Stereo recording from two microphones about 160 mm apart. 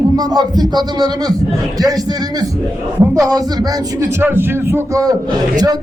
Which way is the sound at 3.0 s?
20° right (ahead or behind).